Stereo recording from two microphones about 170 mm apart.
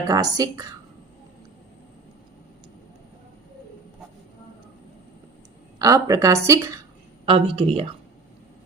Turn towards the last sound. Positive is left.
turn(degrees=-35)  # may be behind; listen again after turning